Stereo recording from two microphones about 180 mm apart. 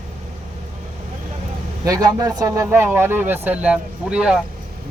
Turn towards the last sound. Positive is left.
turn(degrees=-5)  # may be behind; listen again after turning